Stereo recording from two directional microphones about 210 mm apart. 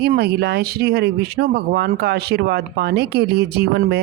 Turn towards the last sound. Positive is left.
turn(degrees=-50)  # may be behind; listen again after turning